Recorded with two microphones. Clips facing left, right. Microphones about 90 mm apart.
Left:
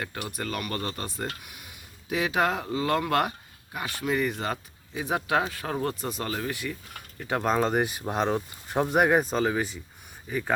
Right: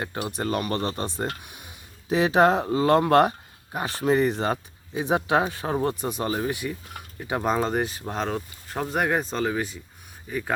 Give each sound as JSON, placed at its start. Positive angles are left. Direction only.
{"t": 0.0, "sound": "speech", "side_deg": -25}